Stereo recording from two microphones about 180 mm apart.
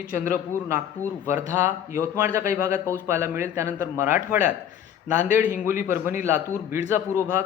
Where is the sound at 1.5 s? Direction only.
15° right (ahead or behind).